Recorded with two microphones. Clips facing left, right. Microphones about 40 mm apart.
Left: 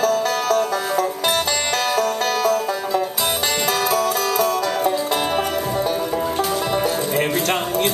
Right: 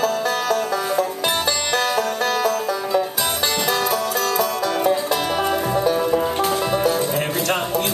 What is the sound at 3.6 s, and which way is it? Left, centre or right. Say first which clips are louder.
Music: left 3 dB; left.